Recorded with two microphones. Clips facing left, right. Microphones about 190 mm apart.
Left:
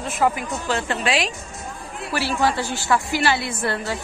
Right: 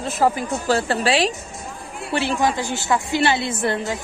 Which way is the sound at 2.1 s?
20° right (ahead or behind).